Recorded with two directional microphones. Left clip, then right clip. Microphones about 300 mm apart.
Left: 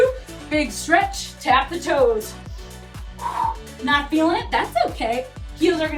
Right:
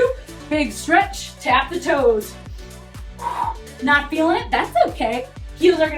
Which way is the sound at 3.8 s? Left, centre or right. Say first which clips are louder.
Right 2 dB; centre.